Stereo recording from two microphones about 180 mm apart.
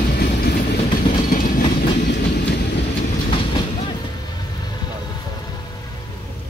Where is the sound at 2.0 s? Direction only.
65° left (ahead or behind).